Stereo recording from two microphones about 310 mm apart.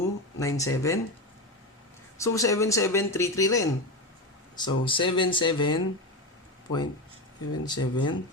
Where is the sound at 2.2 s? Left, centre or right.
Centre.